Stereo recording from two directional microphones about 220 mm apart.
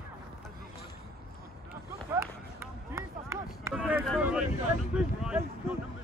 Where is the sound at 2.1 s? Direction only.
15° right (ahead or behind).